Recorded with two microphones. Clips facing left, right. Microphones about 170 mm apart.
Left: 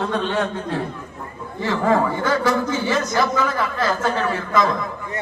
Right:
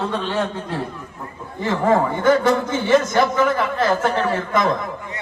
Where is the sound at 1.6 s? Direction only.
20° right (ahead or behind).